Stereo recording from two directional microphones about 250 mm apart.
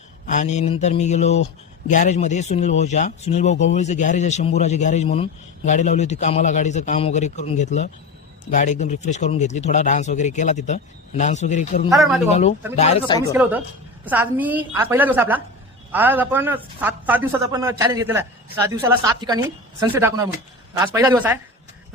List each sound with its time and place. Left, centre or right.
0.3 s speech: left
13.3 s a woman's voice: centre